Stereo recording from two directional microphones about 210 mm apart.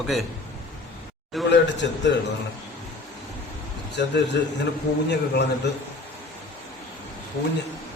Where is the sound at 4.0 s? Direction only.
55° left (ahead or behind).